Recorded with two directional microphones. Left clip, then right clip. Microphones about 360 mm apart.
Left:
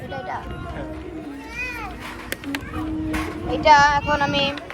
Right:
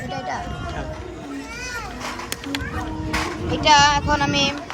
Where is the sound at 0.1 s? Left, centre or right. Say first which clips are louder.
Right 2 dB; centre.